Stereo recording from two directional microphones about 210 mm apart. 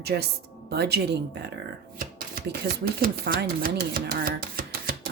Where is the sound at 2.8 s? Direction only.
45° right (ahead or behind).